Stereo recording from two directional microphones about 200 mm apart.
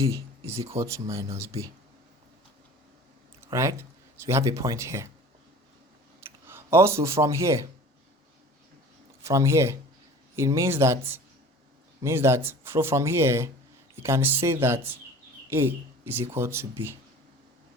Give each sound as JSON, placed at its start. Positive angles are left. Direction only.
{"t": 0.0, "sound": "speech", "side_deg": -15}
{"t": 3.4, "sound": "speech", "side_deg": -15}
{"t": 6.5, "sound": "a man's voice", "side_deg": -10}
{"t": 9.2, "sound": "speech", "side_deg": -15}